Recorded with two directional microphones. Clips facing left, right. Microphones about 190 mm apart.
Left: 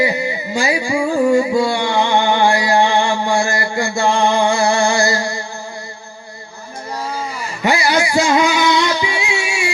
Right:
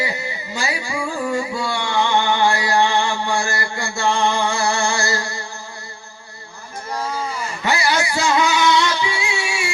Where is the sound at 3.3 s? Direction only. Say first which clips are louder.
Left 5 dB; 15° left (ahead or behind).